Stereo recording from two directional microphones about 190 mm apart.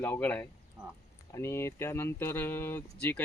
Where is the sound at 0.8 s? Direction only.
20° right (ahead or behind).